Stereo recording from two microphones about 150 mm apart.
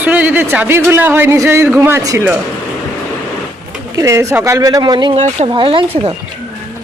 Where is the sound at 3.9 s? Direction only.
20° right (ahead or behind).